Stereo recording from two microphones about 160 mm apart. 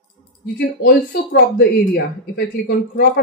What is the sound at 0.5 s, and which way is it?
Speech, 80° left.